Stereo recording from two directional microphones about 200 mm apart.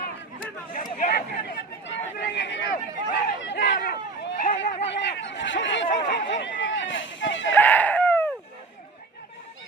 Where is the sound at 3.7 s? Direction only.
45° left (ahead or behind).